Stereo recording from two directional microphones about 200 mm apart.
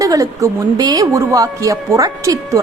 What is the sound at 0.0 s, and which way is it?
A woman's voice, 15° right (ahead or behind).